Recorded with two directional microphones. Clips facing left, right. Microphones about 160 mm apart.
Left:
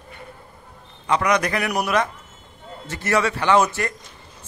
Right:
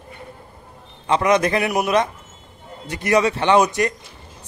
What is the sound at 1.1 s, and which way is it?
A man's voice, 25° right (ahead or behind).